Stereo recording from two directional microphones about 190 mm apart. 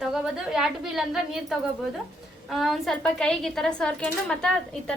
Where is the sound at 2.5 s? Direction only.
Centre (ahead or behind).